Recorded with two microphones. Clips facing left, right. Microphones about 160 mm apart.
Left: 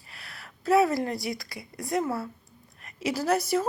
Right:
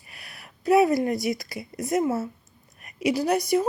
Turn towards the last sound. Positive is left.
turn(degrees=-15)  # may be behind; listen again after turning